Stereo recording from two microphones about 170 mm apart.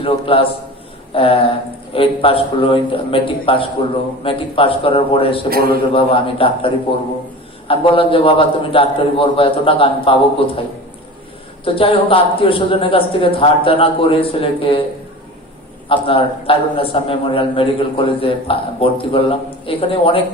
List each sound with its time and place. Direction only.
0.0 s a man's voice: 30° left (ahead or behind)
5.5 s a man's voice: 65° right (ahead or behind)
5.9 s a man's voice: 35° left (ahead or behind)
7.7 s a man's voice: 30° left (ahead or behind)
11.6 s a man's voice: 30° left (ahead or behind)
15.9 s a man's voice: 30° left (ahead or behind)